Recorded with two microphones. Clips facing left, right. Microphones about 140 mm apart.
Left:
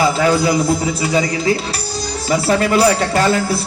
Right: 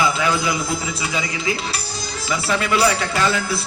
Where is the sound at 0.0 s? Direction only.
40° left (ahead or behind).